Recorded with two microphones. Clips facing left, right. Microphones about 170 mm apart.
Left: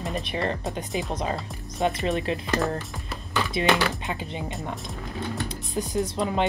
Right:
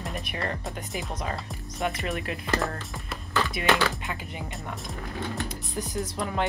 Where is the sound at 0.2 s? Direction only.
25° left (ahead or behind).